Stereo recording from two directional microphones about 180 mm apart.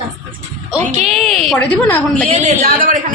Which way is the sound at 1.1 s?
Centre (ahead or behind).